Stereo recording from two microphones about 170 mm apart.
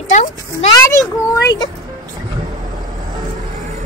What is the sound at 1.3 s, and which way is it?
Speech, 25° left (ahead or behind).